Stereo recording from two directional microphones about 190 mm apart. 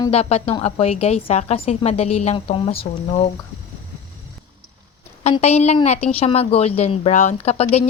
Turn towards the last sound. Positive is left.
turn(degrees=35)  # may be behind; listen again after turning